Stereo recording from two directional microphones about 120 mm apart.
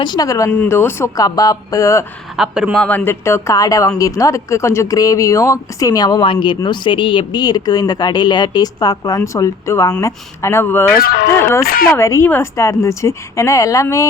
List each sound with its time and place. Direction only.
0.0 s a woman's voice: 35° left (ahead or behind)
2.3 s speech: 5° right (ahead or behind)
2.7 s a woman's voice: 10° left (ahead or behind); by 13.8 s 25° left (ahead or behind)